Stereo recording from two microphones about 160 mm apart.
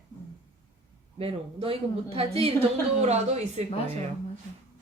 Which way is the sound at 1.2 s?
35° right (ahead or behind).